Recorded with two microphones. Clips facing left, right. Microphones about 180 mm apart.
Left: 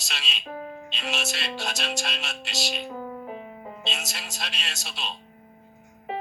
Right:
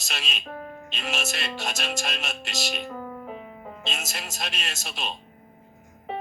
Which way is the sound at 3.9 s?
50° right (ahead or behind).